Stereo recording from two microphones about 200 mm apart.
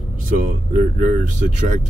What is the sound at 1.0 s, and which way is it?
Speech, 40° right (ahead or behind).